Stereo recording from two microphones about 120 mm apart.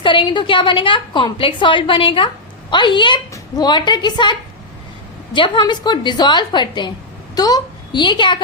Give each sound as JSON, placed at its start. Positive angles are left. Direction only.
{"t": 0.0, "sound": "a woman's voice", "side_deg": 45}